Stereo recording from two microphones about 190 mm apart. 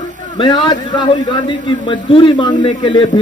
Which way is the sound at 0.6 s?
25° left (ahead or behind).